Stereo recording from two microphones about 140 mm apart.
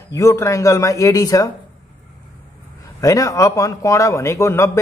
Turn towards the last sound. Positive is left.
turn(degrees=20)  # may be behind; listen again after turning